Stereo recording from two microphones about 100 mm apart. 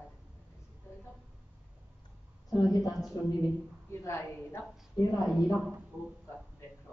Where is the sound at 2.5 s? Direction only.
35° left (ahead or behind).